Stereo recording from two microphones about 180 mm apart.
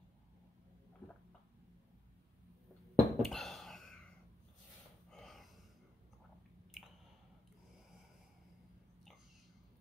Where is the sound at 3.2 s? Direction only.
Centre (ahead or behind).